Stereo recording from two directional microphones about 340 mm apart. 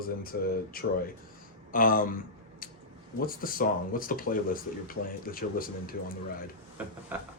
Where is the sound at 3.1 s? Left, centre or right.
Left.